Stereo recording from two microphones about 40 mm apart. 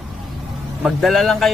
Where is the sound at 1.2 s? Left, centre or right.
Centre.